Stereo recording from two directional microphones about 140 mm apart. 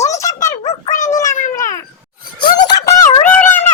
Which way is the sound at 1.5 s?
20° left (ahead or behind).